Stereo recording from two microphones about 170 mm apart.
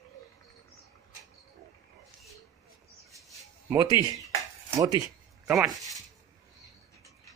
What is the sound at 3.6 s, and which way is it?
Speech, 20° right (ahead or behind).